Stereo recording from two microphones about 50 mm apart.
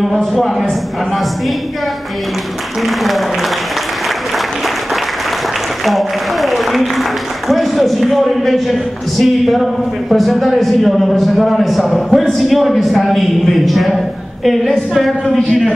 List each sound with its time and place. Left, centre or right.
5.9 s speech: centre